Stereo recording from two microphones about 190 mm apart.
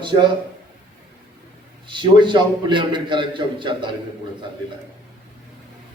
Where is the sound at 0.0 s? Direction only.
25° right (ahead or behind).